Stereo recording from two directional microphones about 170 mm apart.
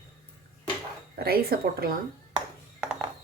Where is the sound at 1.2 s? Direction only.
60° right (ahead or behind).